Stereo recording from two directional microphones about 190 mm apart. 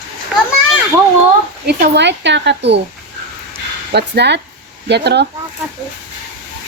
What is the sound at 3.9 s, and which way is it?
Speech, 60° right (ahead or behind).